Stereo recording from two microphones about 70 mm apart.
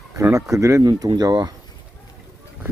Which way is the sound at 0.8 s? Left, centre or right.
Right.